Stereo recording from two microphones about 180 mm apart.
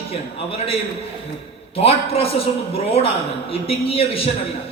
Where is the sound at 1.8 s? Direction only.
30° left (ahead or behind).